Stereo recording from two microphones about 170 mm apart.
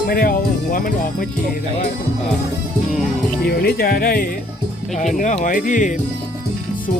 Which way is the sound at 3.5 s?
65° left (ahead or behind).